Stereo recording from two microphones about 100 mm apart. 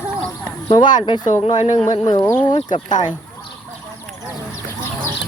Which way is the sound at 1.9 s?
45° left (ahead or behind).